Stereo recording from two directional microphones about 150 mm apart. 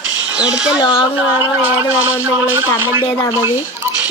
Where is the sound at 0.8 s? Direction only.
35° left (ahead or behind).